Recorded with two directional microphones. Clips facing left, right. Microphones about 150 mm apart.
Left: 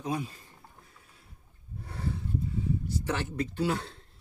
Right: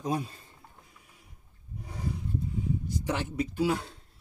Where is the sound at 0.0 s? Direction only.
35° right (ahead or behind).